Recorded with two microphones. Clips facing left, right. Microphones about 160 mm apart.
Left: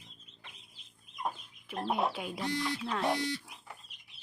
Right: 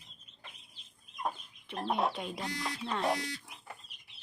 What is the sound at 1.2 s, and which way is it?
Speech, 5° left (ahead or behind).